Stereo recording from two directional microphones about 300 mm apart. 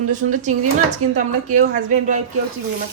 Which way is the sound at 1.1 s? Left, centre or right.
Right.